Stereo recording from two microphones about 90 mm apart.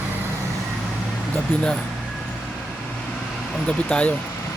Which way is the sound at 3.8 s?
15° left (ahead or behind).